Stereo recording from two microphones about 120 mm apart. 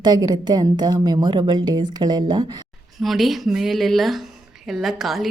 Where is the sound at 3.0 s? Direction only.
Centre (ahead or behind).